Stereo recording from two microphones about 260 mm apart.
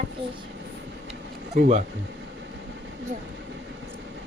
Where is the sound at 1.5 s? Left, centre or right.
Right.